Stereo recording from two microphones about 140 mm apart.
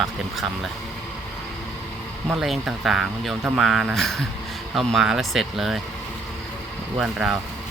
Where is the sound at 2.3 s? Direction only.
Centre (ahead or behind).